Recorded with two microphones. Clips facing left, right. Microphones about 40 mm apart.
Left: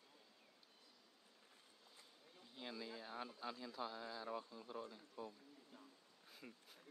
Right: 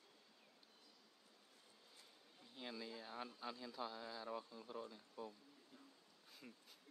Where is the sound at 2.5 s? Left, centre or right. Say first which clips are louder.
Even; centre.